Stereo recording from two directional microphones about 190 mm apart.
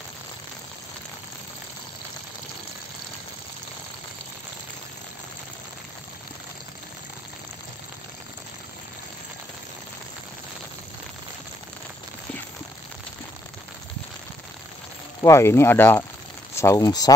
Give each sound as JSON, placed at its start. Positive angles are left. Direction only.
{"t": 15.2, "sound": "speech", "side_deg": 15}